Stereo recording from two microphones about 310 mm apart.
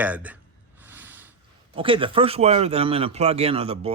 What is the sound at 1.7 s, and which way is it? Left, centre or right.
Speech, centre.